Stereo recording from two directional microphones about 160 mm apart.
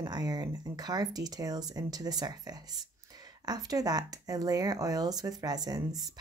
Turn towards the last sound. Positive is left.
turn(degrees=-25)  # may be behind; listen again after turning